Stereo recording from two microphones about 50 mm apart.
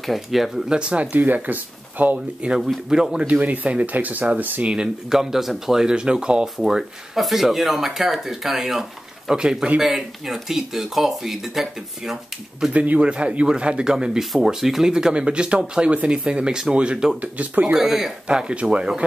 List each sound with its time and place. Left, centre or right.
0.0 s speech: centre
0.7 s speech: right
1.1 s speech: right
2.9 s speech: centre
3.3 s speech: right
5.1 s speech: centre
12.7 s speech: right
17.7 s speech: centre
18.2 s speech: centre